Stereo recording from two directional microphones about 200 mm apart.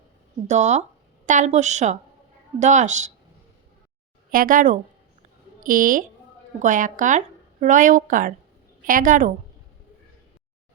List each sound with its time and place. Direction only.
0.4 s a woman's voice: 35° right (ahead or behind)
4.3 s a woman's voice: 45° right (ahead or behind)